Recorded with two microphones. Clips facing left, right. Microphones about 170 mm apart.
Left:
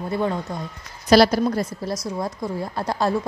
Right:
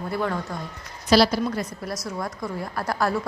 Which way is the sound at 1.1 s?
45° left (ahead or behind).